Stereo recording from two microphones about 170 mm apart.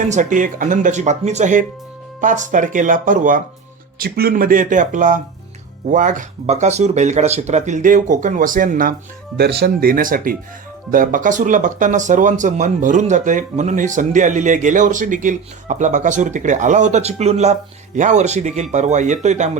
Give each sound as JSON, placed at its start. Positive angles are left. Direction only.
{"t": 0.0, "sound": "speech", "side_deg": -45}
{"t": 3.9, "sound": "speech", "side_deg": -65}
{"t": 9.4, "sound": "speech", "side_deg": -70}